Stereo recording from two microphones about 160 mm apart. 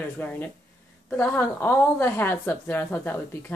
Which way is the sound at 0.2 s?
10° left (ahead or behind).